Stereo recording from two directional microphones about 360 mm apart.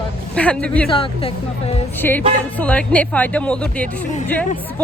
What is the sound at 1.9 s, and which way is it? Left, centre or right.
Speech, centre.